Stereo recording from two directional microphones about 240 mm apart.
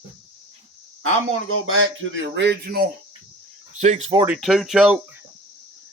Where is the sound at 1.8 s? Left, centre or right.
Right.